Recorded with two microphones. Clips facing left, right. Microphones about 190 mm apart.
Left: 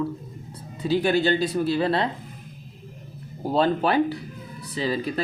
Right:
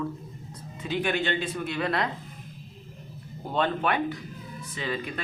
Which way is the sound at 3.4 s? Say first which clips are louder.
Left 5 dB; 35° left (ahead or behind).